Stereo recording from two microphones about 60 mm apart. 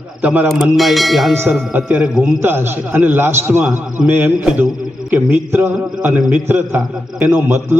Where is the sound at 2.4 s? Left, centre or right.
Right.